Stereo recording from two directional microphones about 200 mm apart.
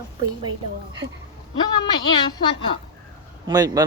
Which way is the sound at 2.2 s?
25° left (ahead or behind).